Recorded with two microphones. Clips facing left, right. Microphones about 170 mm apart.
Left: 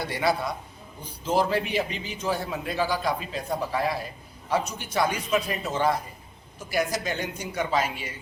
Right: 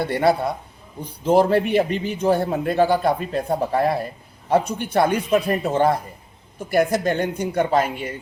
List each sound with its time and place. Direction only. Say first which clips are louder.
0.0 s a man's voice: right 7 dB; 55° right (ahead or behind)